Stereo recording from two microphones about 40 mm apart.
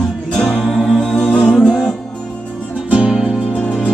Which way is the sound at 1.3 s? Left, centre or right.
Centre.